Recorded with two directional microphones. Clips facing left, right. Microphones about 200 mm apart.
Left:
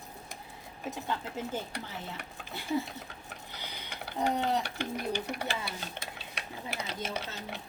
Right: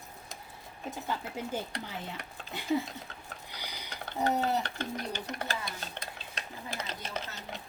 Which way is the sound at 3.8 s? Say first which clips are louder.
Even; 10° left (ahead or behind).